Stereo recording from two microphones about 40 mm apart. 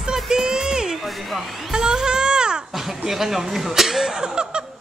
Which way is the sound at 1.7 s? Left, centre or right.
Centre.